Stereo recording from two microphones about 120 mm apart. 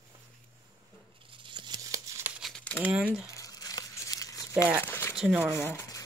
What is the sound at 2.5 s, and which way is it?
Crumpling, 10° left (ahead or behind).